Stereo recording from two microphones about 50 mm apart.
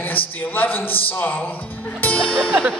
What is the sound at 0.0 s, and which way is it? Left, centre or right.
A man's voice, left.